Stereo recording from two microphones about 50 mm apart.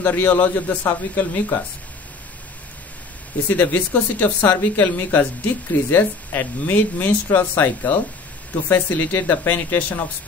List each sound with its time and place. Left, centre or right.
0.0 s a man's voice: left
3.4 s a man's voice: left
4.5 s a woman's voice: left
4.8 s a man's voice: left